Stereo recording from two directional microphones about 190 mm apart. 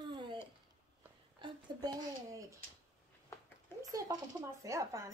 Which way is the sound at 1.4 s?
20° right (ahead or behind).